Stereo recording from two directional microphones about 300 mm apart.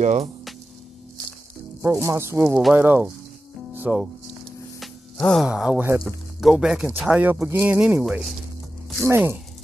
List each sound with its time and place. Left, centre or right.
0.0 s speech: right
1.8 s speech: centre